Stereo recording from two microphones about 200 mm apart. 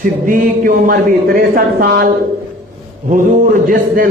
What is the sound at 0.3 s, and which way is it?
A man's voice, 40° right (ahead or behind).